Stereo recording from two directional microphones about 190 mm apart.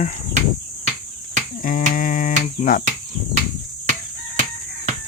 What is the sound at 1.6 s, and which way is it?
Cricket, 45° left (ahead or behind).